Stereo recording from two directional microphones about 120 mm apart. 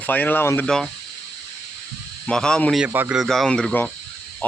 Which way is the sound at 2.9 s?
15° right (ahead or behind).